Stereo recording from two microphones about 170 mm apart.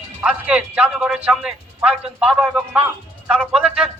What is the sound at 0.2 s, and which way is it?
Speech, 5° right (ahead or behind).